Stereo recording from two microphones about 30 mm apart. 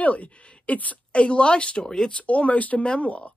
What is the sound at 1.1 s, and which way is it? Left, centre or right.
Speech, left.